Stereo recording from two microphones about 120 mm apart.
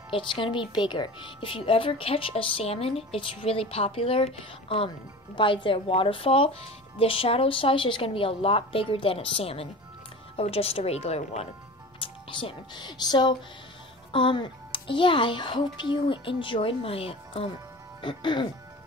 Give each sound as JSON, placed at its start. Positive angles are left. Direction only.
{"t": 0.1, "sound": "a woman's voice", "side_deg": 45}
{"t": 12.0, "sound": "a woman's voice", "side_deg": 45}
{"t": 18.0, "sound": "a woman's voice", "side_deg": 40}